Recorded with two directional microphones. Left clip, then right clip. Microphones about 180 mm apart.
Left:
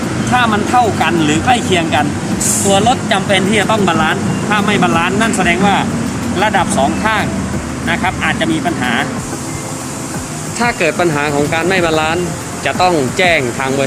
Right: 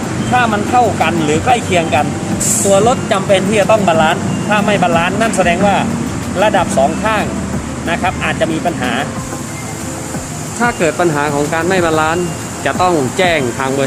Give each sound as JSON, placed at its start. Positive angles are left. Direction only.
{"t": 0.3, "sound": "speech", "side_deg": -15}
{"t": 10.6, "sound": "speech", "side_deg": 0}